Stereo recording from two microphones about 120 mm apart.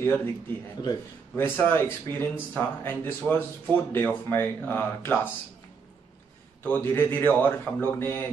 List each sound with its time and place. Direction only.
0.8 s a man's voice: 35° left (ahead or behind)
1.3 s speech: 20° left (ahead or behind)
6.6 s speech: 15° left (ahead or behind)